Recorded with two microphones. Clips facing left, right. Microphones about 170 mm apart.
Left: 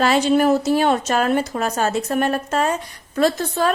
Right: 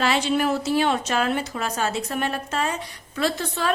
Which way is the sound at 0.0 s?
45° left (ahead or behind).